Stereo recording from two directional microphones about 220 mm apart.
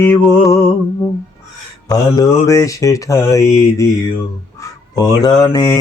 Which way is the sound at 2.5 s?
15° left (ahead or behind).